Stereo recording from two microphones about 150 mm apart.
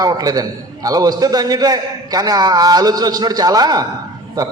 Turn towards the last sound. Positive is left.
turn(degrees=-25)  # may be behind; listen again after turning